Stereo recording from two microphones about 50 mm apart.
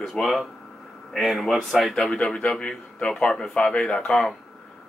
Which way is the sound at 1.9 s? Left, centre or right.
Centre.